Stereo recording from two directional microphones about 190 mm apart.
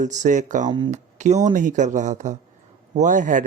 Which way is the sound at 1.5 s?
40° right (ahead or behind).